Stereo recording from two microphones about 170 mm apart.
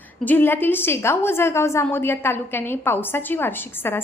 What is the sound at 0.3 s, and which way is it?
A woman's voice, 10° left (ahead or behind).